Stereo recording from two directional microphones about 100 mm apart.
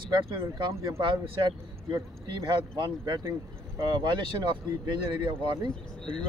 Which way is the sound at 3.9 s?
50° right (ahead or behind).